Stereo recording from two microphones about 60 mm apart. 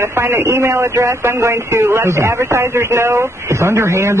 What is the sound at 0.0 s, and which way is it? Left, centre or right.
Speech, right.